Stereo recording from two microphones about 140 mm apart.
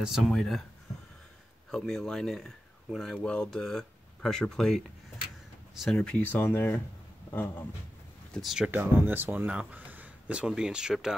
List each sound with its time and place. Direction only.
0.0 s speech: centre (ahead or behind)
1.7 s speech: 5° left (ahead or behind)
8.3 s speech: centre (ahead or behind)